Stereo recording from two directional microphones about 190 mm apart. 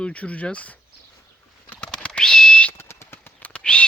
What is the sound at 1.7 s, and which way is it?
Bird, 5° left (ahead or behind).